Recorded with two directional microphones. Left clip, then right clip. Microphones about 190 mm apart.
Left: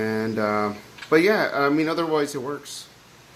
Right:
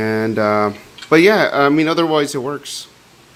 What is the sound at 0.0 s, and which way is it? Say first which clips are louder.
Speech: right 7 dB; 50° right (ahead or behind).